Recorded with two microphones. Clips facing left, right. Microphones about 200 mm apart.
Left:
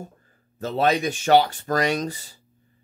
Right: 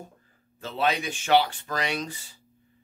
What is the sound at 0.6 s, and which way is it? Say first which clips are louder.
Speech: left 5 dB; 45° left (ahead or behind).